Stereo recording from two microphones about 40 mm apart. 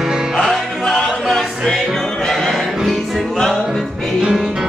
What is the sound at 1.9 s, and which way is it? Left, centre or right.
Music, centre.